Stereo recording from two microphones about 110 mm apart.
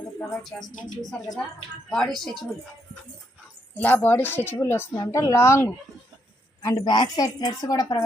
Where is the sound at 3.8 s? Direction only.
15° left (ahead or behind).